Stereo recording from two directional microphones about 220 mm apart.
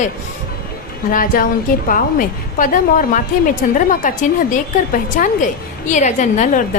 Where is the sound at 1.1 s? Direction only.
40° left (ahead or behind).